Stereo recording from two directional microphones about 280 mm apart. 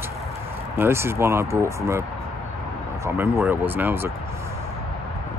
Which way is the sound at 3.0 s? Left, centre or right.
Centre.